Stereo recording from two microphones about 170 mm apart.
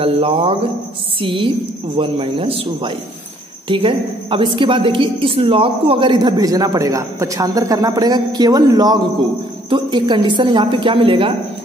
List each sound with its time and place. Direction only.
0.0 s a man's voice: 35° right (ahead or behind)